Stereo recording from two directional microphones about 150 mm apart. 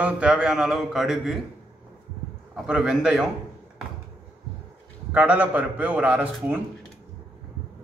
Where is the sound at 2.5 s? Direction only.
5° right (ahead or behind).